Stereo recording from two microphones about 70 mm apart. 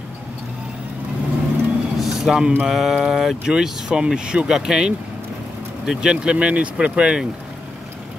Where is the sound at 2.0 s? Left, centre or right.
Centre.